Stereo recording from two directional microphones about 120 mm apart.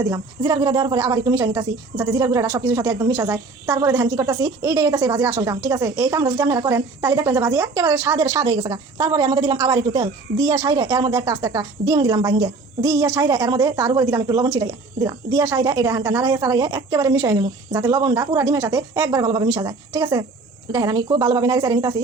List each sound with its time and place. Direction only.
0.0 s a woman's voice: 30° right (ahead or behind)
19.2 s speech: 40° right (ahead or behind)
19.5 s a woman's voice: 30° right (ahead or behind)